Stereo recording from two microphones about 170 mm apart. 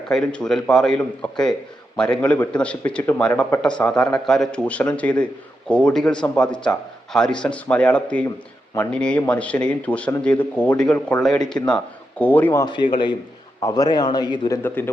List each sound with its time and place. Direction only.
0.1 s a man's voice: 5° left (ahead or behind)
12.7 s a man's voice: 30° left (ahead or behind)